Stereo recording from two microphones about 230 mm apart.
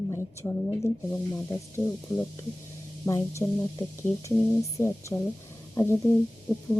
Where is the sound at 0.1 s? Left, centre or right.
Centre.